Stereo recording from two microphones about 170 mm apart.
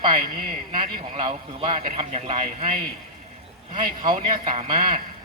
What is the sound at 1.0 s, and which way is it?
A man's voice, 40° right (ahead or behind).